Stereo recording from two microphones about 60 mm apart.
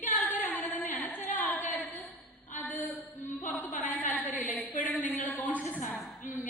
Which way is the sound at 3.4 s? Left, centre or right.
Left.